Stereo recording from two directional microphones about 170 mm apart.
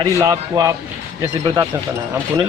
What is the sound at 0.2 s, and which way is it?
Speech, 20° right (ahead or behind).